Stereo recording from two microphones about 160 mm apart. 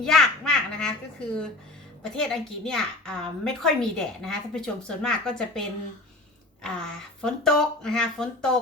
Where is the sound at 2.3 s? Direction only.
5° left (ahead or behind).